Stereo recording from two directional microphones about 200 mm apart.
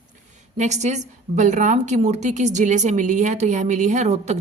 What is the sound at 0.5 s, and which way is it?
A woman's voice, 35° right (ahead or behind).